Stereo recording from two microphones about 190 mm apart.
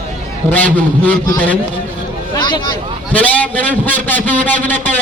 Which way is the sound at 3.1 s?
10° left (ahead or behind).